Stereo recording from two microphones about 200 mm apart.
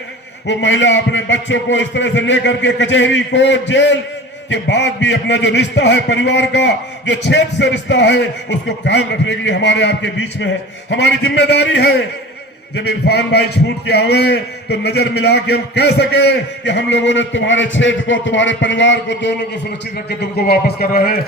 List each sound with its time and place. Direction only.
0.4 s a man's voice: 65° left (ahead or behind)
20.1 s a man's voice: 50° left (ahead or behind)